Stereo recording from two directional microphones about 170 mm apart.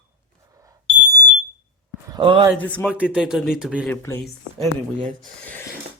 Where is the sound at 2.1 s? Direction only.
25° right (ahead or behind).